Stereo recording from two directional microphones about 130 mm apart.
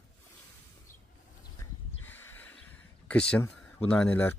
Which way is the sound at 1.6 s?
15° left (ahead or behind).